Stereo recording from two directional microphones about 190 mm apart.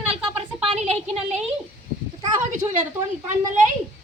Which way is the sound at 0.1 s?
30° right (ahead or behind).